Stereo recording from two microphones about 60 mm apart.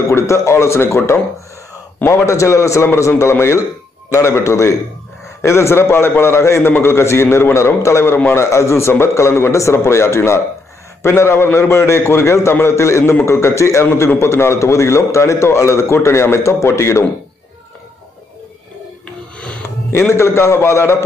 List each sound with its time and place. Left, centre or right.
0.1 s a man's voice: left
19.0 s music: centre
19.9 s a man's voice: left